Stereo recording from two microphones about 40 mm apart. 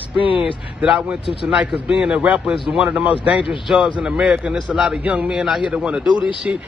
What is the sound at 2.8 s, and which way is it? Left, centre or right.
Speech, right.